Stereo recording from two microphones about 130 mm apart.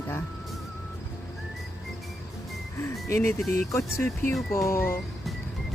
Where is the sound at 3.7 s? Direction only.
20° left (ahead or behind).